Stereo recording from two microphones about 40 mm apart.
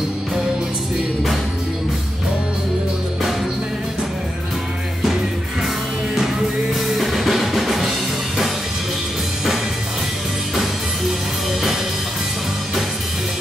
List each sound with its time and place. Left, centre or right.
6.1 s music: centre